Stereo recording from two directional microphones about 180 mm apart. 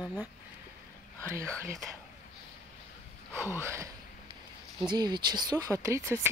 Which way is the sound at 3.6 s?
15° right (ahead or behind).